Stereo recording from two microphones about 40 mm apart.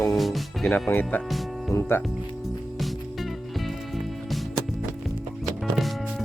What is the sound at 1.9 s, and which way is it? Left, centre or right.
Speech, left.